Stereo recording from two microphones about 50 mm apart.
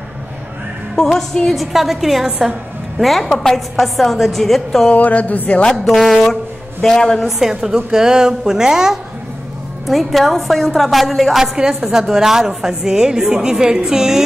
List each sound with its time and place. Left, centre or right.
1.1 s a woman's voice: centre
4.9 s speech: left
5.9 s a woman's voice: centre
7.2 s a woman's voice: centre
9.8 s a woman's voice: centre